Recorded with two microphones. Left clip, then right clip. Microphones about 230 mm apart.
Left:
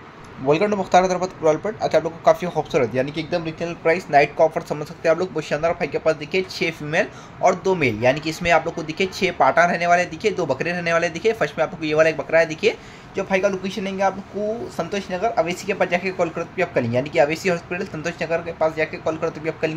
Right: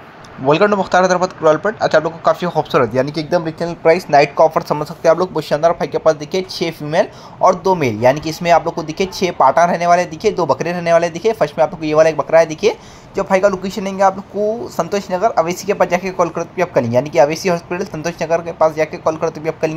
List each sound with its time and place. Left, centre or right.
0.5 s speech: centre
3.1 s speech: right
3.6 s speech: right